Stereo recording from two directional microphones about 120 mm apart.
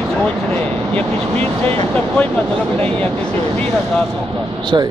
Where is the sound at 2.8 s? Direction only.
10° left (ahead or behind).